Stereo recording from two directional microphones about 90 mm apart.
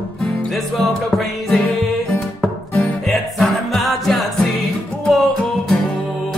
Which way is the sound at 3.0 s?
Centre (ahead or behind).